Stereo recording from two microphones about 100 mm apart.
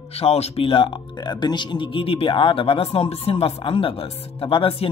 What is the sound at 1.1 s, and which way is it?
Speech, 50° left (ahead or behind).